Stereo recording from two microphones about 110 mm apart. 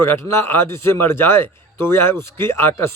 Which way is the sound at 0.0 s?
25° left (ahead or behind).